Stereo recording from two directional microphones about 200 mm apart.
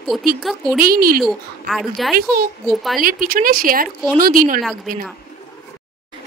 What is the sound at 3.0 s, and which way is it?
Speech, 45° right (ahead or behind).